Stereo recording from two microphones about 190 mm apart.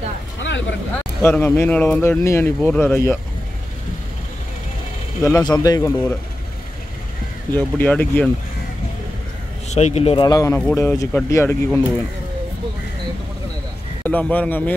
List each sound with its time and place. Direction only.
0.4 s vehicle: 75° left (ahead or behind)
1.2 s speech: 10° left (ahead or behind)
5.2 s speech: 15° left (ahead or behind)
7.5 s speech: 10° left (ahead or behind)
9.7 s speech: 35° left (ahead or behind)
10.2 s speech: 15° left (ahead or behind)
14.0 s speech: 10° left (ahead or behind)